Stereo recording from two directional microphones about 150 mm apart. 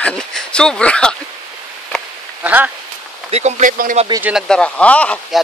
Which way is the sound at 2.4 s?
10° right (ahead or behind).